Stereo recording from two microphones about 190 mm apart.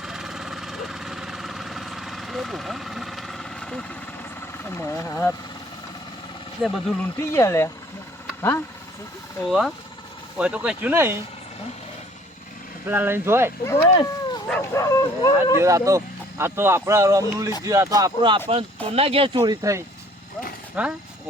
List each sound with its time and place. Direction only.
0.0 s engine: centre (ahead or behind); by 5.3 s 15° left (ahead or behind)
6.6 s speech: 5° right (ahead or behind)
7.2 s speech: 15° left (ahead or behind)
9.5 s speech: centre (ahead or behind)
12.9 s speech: 10° right (ahead or behind)
13.7 s speech: 10° left (ahead or behind)
15.6 s speech: 15° right (ahead or behind)
19.4 s speech: 15° right (ahead or behind)